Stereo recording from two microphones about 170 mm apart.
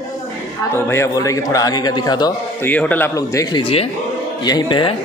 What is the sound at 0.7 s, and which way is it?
A man's voice, 15° left (ahead or behind).